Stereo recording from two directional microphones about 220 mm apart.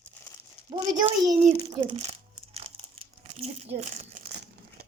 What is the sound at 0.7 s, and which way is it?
Speech, 20° right (ahead or behind).